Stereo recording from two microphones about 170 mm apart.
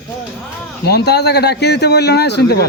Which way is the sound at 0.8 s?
75° left (ahead or behind).